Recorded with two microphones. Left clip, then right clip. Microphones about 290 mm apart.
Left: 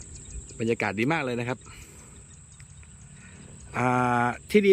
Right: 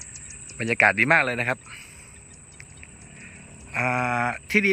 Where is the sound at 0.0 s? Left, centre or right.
Left.